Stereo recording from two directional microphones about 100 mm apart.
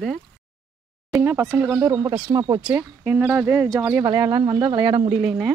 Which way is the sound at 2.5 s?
20° right (ahead or behind).